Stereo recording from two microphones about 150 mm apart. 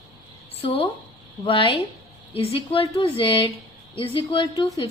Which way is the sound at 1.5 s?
35° left (ahead or behind).